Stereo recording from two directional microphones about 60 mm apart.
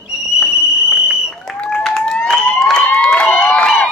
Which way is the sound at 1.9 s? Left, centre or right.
Centre.